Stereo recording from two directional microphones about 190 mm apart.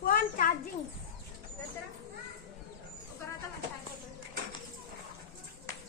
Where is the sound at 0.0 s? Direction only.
50° left (ahead or behind).